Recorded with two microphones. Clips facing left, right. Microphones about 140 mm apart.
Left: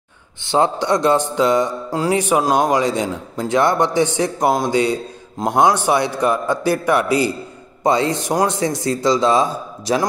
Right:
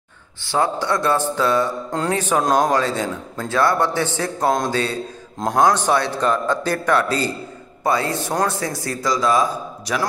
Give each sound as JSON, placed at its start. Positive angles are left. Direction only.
{"t": 0.5, "sound": "a man's voice", "side_deg": 20}